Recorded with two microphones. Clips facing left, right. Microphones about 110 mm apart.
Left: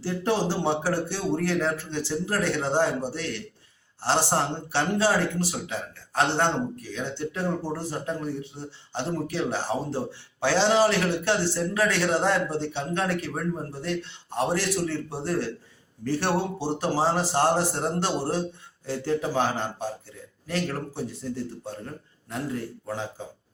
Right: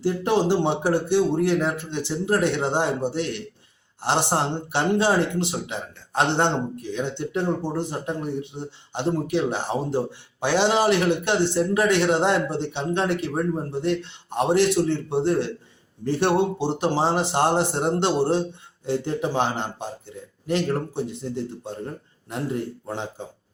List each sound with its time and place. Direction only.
0.0 s speech: 20° right (ahead or behind)